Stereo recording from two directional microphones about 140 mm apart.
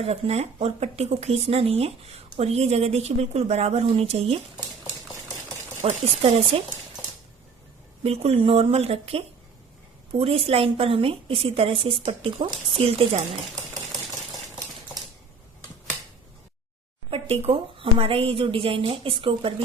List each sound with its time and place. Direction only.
0.0 s a woman's voice: 45° right (ahead or behind)
5.8 s a woman's voice: 45° right (ahead or behind)
8.0 s a woman's voice: 45° right (ahead or behind)
17.1 s a woman's voice: 45° right (ahead or behind)